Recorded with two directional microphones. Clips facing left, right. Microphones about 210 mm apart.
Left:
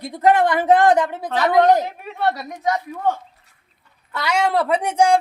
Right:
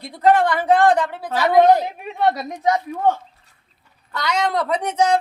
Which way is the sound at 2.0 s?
20° right (ahead or behind).